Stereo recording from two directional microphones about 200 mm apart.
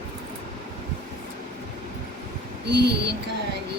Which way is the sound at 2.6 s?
55° right (ahead or behind).